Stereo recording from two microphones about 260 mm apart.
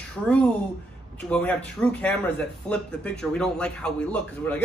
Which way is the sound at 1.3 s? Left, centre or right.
Centre.